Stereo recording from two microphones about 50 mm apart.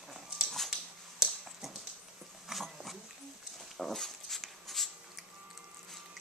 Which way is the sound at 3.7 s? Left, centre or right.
Centre.